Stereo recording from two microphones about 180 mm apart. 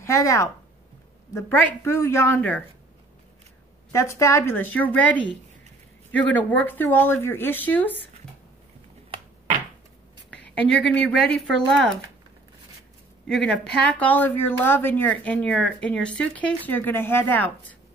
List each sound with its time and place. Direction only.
0.0 s speech: 15° left (ahead or behind)
3.9 s speech: 15° left (ahead or behind)
10.3 s speech: 5° left (ahead or behind)
13.3 s speech: 5° left (ahead or behind)